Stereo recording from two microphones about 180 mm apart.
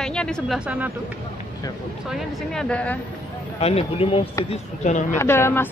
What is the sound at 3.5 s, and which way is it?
Speech, 35° left (ahead or behind).